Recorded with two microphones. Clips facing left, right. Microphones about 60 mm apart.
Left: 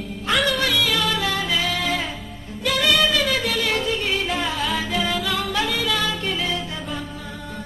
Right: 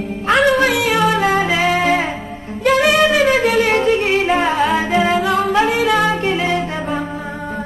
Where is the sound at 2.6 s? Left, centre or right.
Right.